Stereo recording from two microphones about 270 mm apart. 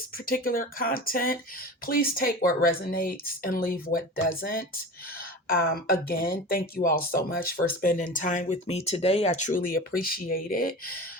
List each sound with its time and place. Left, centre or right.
0.3 s speech: left